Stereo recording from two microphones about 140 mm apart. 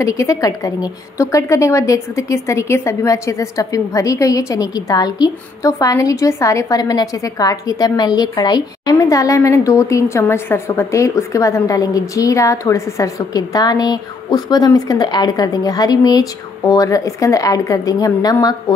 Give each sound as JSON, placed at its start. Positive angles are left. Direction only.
{"t": 0.0, "sound": "a woman's voice", "side_deg": 25}